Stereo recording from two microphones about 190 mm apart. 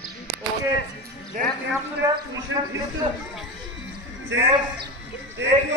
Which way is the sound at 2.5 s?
90° right.